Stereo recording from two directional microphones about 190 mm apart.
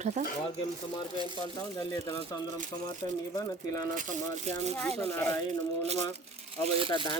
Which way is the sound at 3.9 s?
40° right (ahead or behind).